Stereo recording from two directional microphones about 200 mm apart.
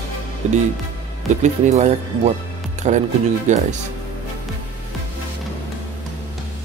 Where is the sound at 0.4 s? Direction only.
35° right (ahead or behind).